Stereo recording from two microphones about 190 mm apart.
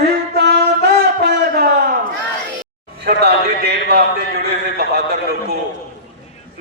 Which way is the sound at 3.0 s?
60° right (ahead or behind).